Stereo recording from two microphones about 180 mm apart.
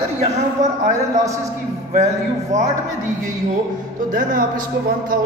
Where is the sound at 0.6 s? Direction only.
45° right (ahead or behind).